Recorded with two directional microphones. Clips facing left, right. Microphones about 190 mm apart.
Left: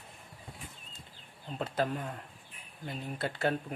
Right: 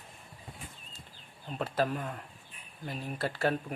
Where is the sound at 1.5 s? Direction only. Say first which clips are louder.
Right 1 dB; 25° left (ahead or behind).